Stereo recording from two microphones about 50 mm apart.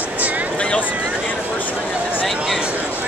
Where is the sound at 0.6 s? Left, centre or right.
Left.